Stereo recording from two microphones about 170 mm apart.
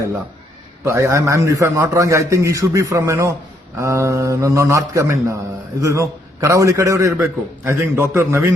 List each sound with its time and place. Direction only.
0.9 s a man's voice: 15° right (ahead or behind)